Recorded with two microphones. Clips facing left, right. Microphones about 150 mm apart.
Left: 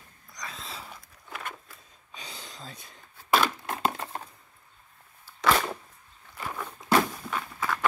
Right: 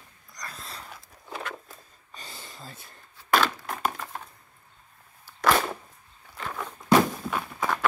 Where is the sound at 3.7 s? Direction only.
25° left (ahead or behind).